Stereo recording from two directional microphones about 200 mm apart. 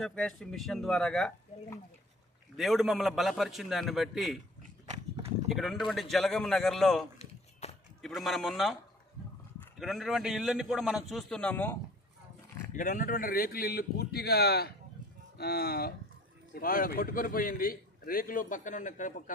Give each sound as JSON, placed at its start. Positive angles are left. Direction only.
{"t": 0.0, "sound": "a man's voice", "side_deg": 5}
{"t": 2.6, "sound": "a man's voice", "side_deg": 0}
{"t": 5.5, "sound": "a man's voice", "side_deg": 0}
{"t": 7.2, "sound": "a sound", "side_deg": 30}
{"t": 8.0, "sound": "a man's voice", "side_deg": 0}
{"t": 9.7, "sound": "a man's voice", "side_deg": 0}
{"t": 12.7, "sound": "a man's voice", "side_deg": 40}